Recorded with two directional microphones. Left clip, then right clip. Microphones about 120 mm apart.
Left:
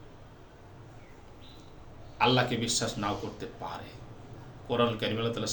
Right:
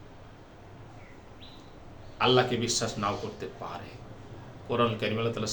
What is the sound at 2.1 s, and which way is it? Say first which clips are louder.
Speech: right 2 dB; 15° right (ahead or behind).